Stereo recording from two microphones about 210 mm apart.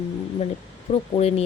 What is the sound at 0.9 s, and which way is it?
Speech, 30° left (ahead or behind).